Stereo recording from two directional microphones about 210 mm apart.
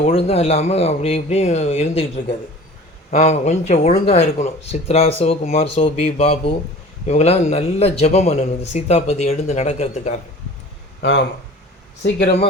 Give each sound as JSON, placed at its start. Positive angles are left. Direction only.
{"t": 0.0, "sound": "a man's voice", "side_deg": 30}
{"t": 11.0, "sound": "speech", "side_deg": 55}